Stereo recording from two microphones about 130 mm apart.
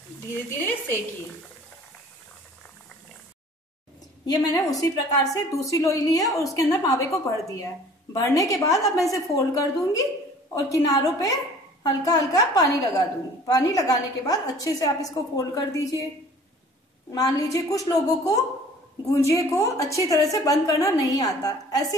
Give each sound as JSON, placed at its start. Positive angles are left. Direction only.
{"t": 0.6, "sound": "a woman's voice", "side_deg": 15}
{"t": 4.3, "sound": "a woman's voice", "side_deg": 30}
{"t": 17.1, "sound": "a woman's voice", "side_deg": 25}